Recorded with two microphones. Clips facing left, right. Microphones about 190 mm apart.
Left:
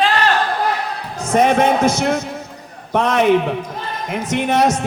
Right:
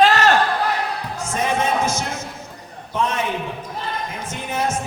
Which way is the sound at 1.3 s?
65° left (ahead or behind).